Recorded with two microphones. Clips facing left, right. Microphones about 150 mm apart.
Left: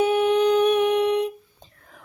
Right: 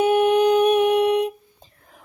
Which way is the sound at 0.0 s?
55° right (ahead or behind).